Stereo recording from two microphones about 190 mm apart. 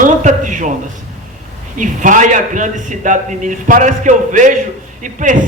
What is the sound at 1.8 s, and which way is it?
A man's voice, 40° right (ahead or behind).